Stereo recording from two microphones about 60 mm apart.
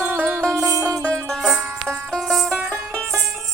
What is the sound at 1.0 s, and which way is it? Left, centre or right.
Music, centre.